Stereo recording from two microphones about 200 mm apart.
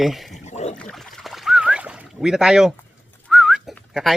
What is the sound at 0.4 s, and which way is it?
Boat, 35° left (ahead or behind).